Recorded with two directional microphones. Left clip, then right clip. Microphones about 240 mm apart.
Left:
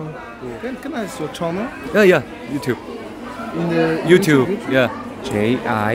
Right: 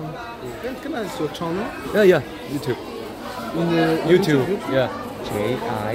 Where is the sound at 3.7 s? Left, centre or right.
Left.